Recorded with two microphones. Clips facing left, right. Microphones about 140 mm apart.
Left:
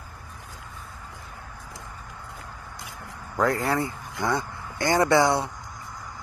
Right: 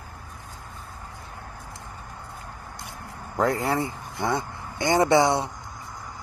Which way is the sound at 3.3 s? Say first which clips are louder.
Even; 25° right (ahead or behind).